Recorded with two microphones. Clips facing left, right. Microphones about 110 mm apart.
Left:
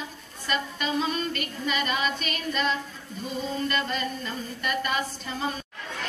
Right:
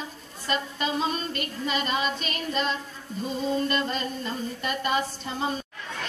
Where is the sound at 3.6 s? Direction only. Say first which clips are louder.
Right 1 dB; 30° right (ahead or behind).